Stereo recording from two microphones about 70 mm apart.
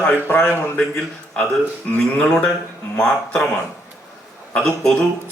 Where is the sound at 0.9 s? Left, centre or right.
Centre.